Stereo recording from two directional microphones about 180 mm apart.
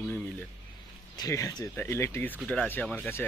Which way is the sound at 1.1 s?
20° left (ahead or behind).